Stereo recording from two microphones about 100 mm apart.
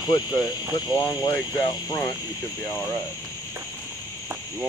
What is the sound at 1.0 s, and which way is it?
Speech, 40° left (ahead or behind).